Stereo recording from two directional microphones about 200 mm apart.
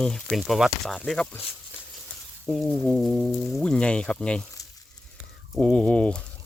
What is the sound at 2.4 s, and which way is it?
Speech, centre (ahead or behind).